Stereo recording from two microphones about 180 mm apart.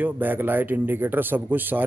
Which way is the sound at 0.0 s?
10° right (ahead or behind).